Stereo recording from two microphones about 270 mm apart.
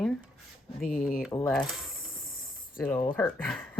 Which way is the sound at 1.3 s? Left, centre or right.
Centre.